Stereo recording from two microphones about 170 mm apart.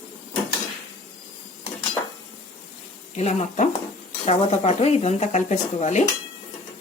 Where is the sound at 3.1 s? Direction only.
40° left (ahead or behind).